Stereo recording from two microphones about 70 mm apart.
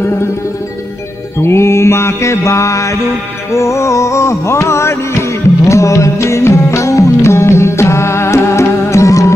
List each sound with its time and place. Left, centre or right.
1.4 s mantra: left
3.5 s music: left